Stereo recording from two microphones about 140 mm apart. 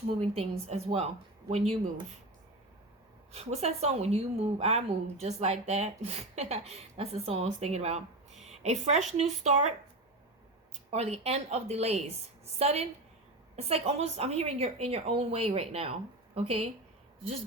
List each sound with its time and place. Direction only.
0.2 s speech: 45° right (ahead or behind)
3.3 s speech: 50° right (ahead or behind)
10.9 s speech: 50° right (ahead or behind)